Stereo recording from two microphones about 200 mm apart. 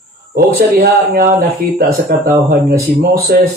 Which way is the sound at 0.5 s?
45° right (ahead or behind).